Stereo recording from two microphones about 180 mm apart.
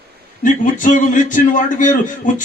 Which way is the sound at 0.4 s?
45° left (ahead or behind).